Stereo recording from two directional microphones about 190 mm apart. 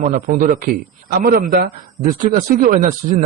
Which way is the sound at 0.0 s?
45° right (ahead or behind).